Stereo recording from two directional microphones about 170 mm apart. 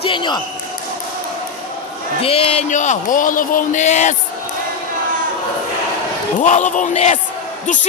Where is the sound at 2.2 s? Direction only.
35° left (ahead or behind).